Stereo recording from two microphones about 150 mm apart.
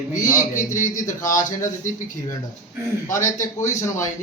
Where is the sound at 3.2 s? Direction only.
55° left (ahead or behind).